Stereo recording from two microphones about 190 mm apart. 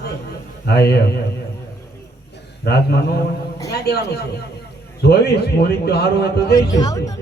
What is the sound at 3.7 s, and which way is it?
Speech, 60° left (ahead or behind).